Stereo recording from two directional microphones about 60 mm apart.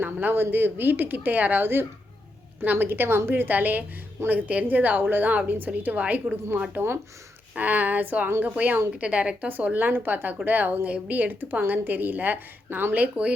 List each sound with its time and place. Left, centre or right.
0.0 s a woman's voice: right
6.7 s speech: right
7.5 s a woman's voice: right
9.5 s a woman's voice: right